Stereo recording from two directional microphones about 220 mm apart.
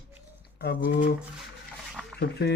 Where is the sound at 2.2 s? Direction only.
50° left (ahead or behind).